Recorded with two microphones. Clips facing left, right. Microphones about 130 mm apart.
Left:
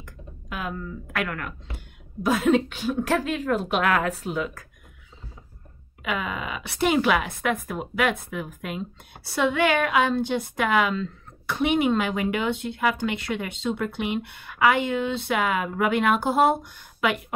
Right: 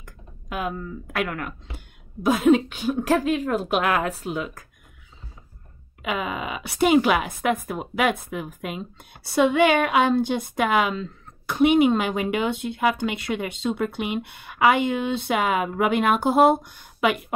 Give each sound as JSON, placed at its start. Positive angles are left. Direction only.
{"t": 0.0, "sound": "a woman's voice", "side_deg": -15}
{"t": 6.0, "sound": "speech", "side_deg": -20}